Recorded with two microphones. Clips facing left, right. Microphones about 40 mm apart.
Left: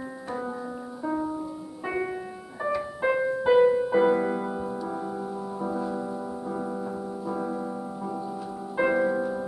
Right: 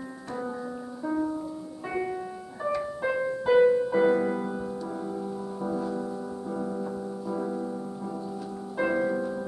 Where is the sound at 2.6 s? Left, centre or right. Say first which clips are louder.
Left 2 dB; centre.